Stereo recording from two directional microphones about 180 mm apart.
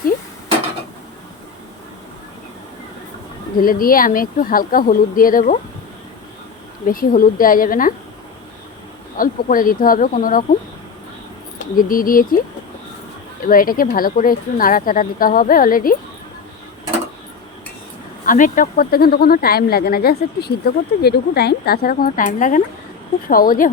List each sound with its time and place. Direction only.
3.6 s speech: 50° left (ahead or behind)
6.8 s speech: 50° left (ahead or behind)
9.1 s speech: 50° left (ahead or behind)
11.8 s speech: 50° left (ahead or behind)
13.4 s speech: 50° left (ahead or behind)
18.3 s speech: 45° left (ahead or behind)